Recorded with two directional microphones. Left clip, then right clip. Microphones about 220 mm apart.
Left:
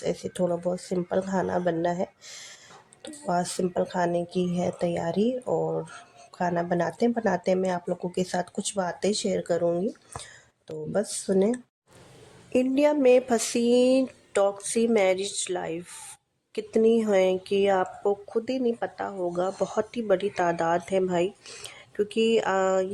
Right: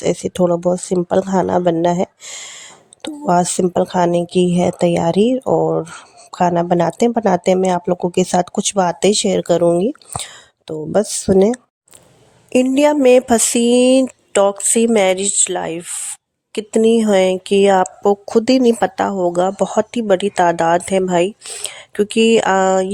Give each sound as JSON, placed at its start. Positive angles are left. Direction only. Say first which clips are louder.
{"t": 0.0, "sound": "speech", "louder": "right 11 dB", "side_deg": -35}
{"t": 12.5, "sound": "speech", "louder": "right 9 dB", "side_deg": -25}